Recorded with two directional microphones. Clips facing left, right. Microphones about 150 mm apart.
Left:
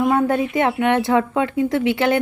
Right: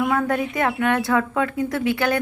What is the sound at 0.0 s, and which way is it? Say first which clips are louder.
Speech: left 4 dB; 25° left (ahead or behind).